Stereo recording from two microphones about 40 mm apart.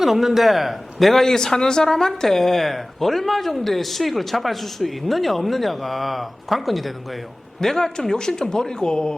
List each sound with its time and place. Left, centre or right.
0.0 s a man's voice: centre
7.6 s speech: centre